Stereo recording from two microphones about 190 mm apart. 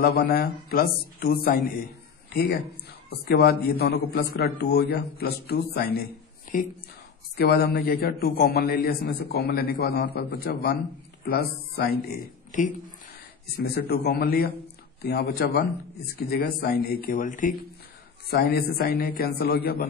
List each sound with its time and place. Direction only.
0.0 s a man's voice: 55° left (ahead or behind)
2.2 s a sound: 55° left (ahead or behind)
3.1 s a man's voice: 55° left (ahead or behind)
18.3 s a man's voice: 55° left (ahead or behind)